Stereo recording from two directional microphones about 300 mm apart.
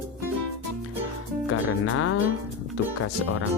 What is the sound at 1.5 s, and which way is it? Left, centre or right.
Music, left.